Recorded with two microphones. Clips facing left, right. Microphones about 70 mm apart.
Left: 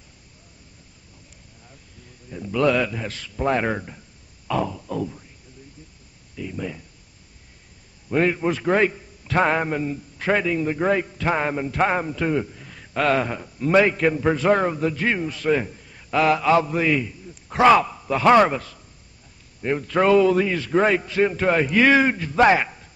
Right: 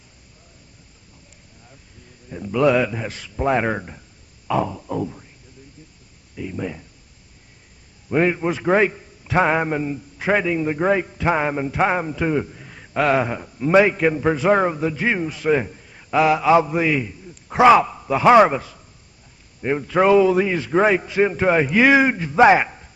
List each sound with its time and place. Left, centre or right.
2.3 s a man's voice: centre
6.3 s a man's voice: centre
8.1 s a man's voice: centre